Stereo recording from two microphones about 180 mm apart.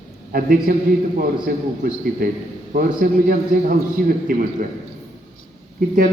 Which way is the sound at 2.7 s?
55° right (ahead or behind).